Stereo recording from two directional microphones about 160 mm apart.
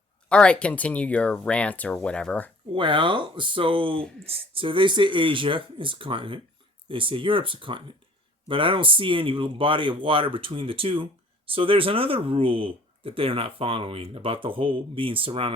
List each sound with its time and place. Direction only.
0.3 s speech: 5° left (ahead or behind)
2.7 s speech: 30° right (ahead or behind)